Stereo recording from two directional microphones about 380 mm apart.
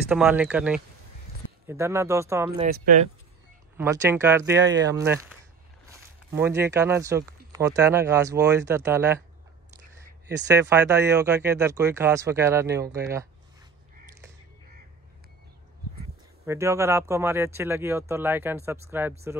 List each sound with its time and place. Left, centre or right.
0.1 s speech: centre
2.6 s speech: right
3.7 s speech: centre
10.5 s speech: centre
16.4 s speech: centre